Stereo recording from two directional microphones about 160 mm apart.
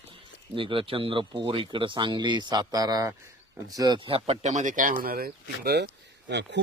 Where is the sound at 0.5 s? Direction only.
30° right (ahead or behind).